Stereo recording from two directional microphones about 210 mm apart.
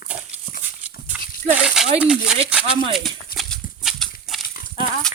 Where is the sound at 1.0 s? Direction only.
5° right (ahead or behind).